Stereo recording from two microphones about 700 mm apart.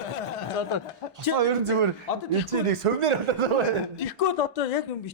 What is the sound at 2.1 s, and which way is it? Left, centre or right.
Speech, left.